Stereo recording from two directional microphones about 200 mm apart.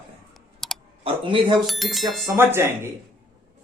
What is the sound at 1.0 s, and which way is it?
Speech, 25° right (ahead or behind).